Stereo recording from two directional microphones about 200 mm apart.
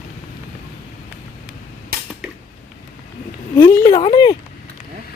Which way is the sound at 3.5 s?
10° left (ahead or behind).